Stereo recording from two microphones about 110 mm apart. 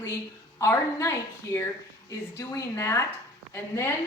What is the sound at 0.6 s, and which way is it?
A woman's voice, 25° left (ahead or behind).